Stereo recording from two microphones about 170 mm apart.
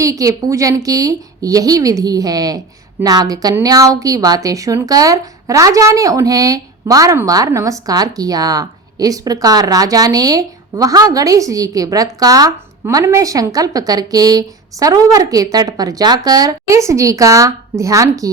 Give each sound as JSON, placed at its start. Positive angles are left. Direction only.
{"t": 0.0, "sound": "a woman's voice", "side_deg": -20}